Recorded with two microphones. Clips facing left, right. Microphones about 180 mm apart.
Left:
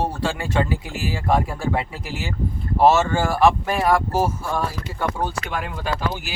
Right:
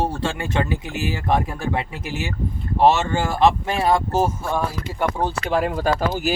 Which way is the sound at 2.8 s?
20° right (ahead or behind).